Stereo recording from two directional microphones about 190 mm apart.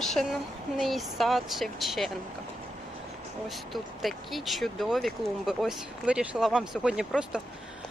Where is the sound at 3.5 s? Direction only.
Centre (ahead or behind).